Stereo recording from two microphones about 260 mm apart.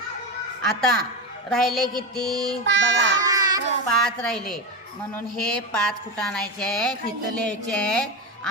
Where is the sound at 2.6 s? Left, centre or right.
Right.